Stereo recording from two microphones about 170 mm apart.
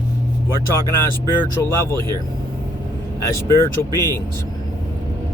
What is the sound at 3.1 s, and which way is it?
Speech, 15° left (ahead or behind).